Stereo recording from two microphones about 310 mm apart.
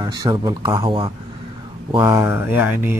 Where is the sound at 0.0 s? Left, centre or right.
Centre.